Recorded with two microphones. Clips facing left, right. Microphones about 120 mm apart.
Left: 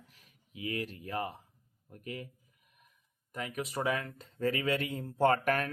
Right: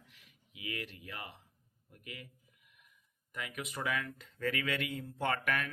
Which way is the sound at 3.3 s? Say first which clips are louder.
Left 5 dB; 35° left (ahead or behind).